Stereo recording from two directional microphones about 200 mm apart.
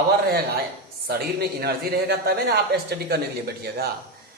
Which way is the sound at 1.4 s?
55° right (ahead or behind).